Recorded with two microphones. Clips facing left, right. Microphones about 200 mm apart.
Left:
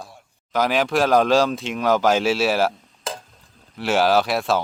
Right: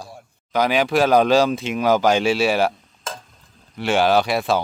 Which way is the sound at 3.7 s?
Centre (ahead or behind).